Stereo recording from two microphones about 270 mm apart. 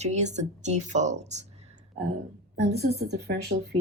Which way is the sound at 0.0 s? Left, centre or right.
Right.